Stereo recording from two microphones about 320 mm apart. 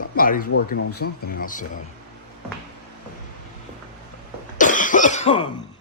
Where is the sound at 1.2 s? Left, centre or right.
Left.